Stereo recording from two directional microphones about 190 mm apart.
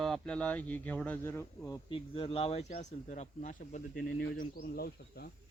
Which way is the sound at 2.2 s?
30° left (ahead or behind).